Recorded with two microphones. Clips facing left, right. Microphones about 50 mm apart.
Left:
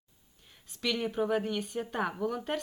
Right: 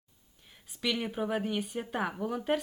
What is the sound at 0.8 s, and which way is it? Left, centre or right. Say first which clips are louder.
Speech: left 1 dB; centre.